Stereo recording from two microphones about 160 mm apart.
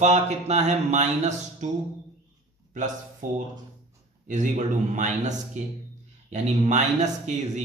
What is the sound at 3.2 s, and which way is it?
Speech, 55° right (ahead or behind).